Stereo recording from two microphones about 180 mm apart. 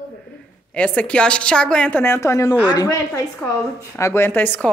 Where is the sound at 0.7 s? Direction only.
5° left (ahead or behind).